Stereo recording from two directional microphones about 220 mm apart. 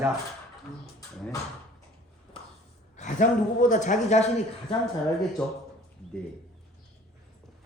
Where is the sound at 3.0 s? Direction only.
35° left (ahead or behind).